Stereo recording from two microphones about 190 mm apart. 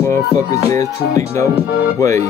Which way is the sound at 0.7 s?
15° left (ahead or behind).